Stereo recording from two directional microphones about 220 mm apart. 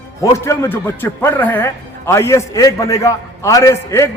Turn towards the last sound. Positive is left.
turn(degrees=10)  # may be behind; listen again after turning